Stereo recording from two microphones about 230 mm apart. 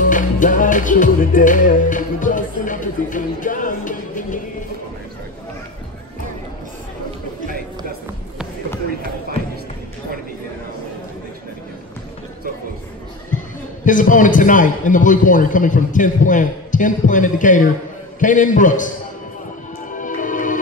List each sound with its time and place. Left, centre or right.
0.1 s music: left
13.8 s a man's voice: left
19.9 s music: left